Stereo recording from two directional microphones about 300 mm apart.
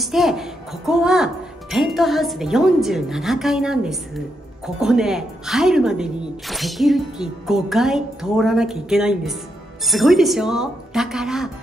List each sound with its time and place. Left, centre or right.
0.0 s speech: centre